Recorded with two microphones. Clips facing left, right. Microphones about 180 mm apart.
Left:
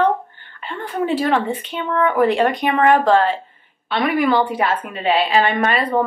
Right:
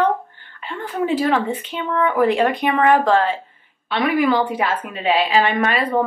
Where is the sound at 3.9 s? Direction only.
10° right (ahead or behind).